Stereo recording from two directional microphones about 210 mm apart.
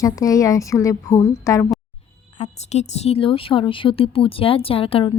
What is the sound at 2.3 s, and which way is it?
Speech, 35° left (ahead or behind).